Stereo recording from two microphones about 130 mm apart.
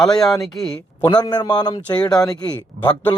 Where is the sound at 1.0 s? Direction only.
35° left (ahead or behind).